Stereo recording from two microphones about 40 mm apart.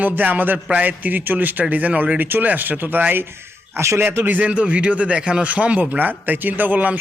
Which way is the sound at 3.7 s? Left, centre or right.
Right.